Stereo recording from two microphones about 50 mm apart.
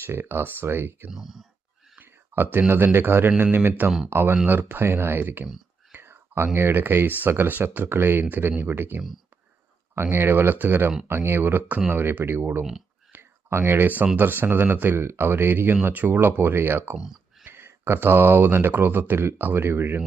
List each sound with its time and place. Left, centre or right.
0.0 s speech: right
1.1 s speech: centre
2.0 s speech: right
13.1 s a sound: right
13.8 s speech: right